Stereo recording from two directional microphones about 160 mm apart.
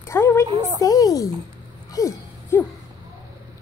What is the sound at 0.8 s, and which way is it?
Speech, 25° left (ahead or behind).